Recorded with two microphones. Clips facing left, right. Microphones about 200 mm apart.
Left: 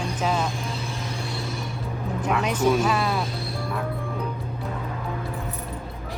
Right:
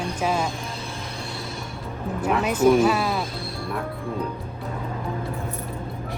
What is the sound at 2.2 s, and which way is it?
Speech, 10° right (ahead or behind).